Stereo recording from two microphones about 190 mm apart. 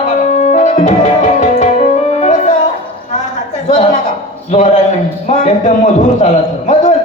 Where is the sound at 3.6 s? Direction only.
35° left (ahead or behind).